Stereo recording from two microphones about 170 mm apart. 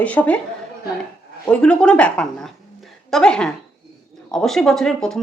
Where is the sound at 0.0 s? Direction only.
10° left (ahead or behind).